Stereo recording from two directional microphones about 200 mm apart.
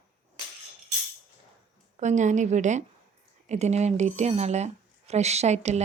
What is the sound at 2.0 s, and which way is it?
Speech, 35° right (ahead or behind).